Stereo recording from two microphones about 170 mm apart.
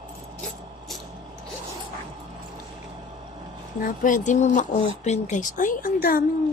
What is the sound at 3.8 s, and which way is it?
Speech, 50° left (ahead or behind).